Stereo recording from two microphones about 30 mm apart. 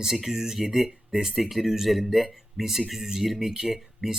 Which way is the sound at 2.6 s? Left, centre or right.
Centre.